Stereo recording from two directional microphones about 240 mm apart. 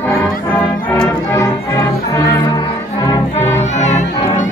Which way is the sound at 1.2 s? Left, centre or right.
Centre.